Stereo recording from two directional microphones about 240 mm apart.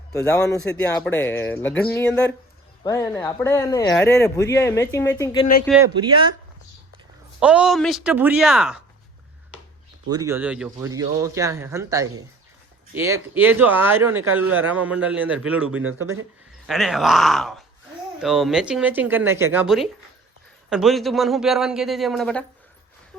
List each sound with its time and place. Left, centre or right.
0.4 s a man's voice: centre
5.6 s a man's voice: centre
6.0 s speech: centre
7.3 s a man's voice: centre
10.1 s a man's voice: centre
16.6 s a man's voice: centre